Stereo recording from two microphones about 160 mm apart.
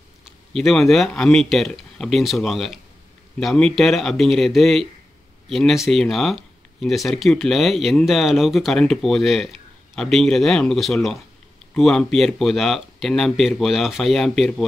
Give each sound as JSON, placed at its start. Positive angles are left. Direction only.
{"t": 0.2, "sound": "speech", "side_deg": 0}